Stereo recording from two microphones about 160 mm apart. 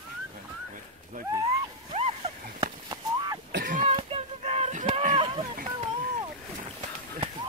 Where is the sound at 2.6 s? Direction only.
25° right (ahead or behind).